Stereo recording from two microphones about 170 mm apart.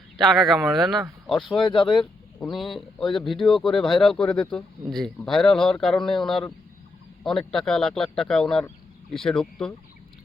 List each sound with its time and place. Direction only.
0.2 s speech: centre (ahead or behind)
1.5 s speech: 30° left (ahead or behind)
2.5 s speech: centre (ahead or behind)